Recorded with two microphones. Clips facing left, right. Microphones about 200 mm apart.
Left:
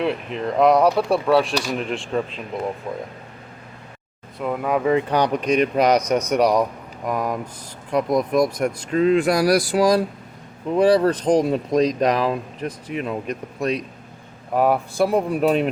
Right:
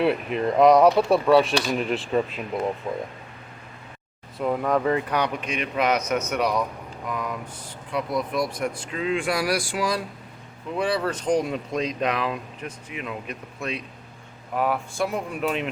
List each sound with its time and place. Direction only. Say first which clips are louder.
0.0 s speech: right 1 dB; 5° right (ahead or behind)
4.4 s speech: left 1 dB; centre (ahead or behind)
4.9 s speech: left 5 dB; 30° left (ahead or behind)